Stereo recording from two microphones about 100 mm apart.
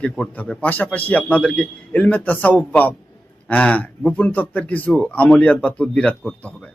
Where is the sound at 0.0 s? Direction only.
10° left (ahead or behind).